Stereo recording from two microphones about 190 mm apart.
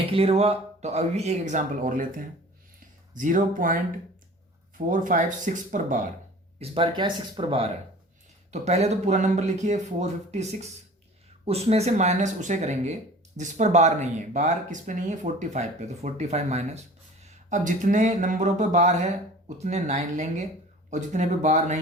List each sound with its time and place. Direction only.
0.0 s speech: 30° right (ahead or behind)
4.9 s speech: 45° right (ahead or behind)
6.6 s speech: 25° right (ahead or behind)